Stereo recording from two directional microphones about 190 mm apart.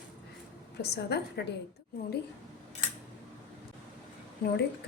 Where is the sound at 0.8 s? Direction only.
60° left (ahead or behind).